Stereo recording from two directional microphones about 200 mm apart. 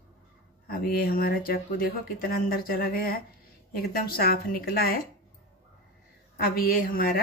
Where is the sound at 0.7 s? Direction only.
45° left (ahead or behind).